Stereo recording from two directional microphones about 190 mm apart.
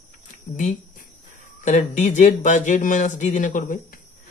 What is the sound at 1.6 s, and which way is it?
Speech, 40° left (ahead or behind).